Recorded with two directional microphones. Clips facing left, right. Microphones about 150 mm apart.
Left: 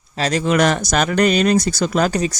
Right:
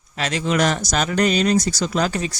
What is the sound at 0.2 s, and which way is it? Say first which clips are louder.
Speech: left 4 dB; 40° left (ahead or behind).